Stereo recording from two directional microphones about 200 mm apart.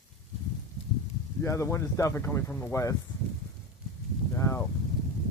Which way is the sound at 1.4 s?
15° left (ahead or behind).